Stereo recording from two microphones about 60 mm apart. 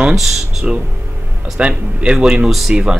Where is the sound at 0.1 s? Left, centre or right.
Centre.